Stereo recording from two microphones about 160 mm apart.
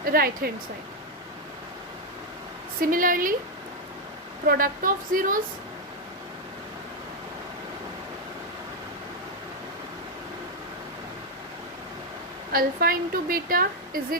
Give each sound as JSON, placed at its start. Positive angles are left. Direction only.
{"t": 0.0, "sound": "a woman's voice", "side_deg": -65}
{"t": 2.8, "sound": "a woman's voice", "side_deg": -60}
{"t": 4.4, "sound": "a woman's voice", "side_deg": -60}
{"t": 12.5, "sound": "a woman's voice", "side_deg": -65}